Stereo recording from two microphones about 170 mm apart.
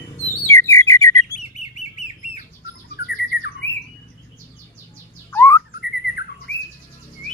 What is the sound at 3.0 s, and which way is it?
Squawk, 75° left (ahead or behind).